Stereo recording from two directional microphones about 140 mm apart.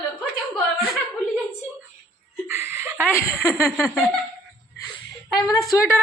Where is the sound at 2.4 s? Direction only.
20° right (ahead or behind).